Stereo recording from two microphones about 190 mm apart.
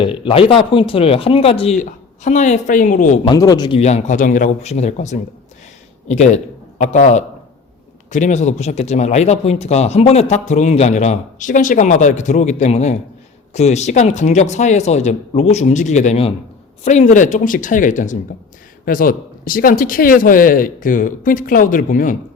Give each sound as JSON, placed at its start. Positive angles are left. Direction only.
{"t": 0.0, "sound": "speech", "side_deg": 30}
{"t": 3.2, "sound": "speech", "side_deg": 20}
{"t": 3.8, "sound": "a man's voice", "side_deg": 35}